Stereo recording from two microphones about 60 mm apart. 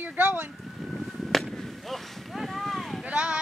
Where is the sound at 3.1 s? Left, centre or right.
Centre.